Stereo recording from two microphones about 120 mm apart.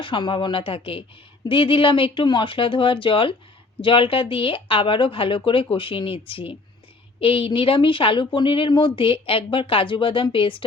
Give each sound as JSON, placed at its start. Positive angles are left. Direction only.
{"t": 0.0, "sound": "a woman's voice", "side_deg": 45}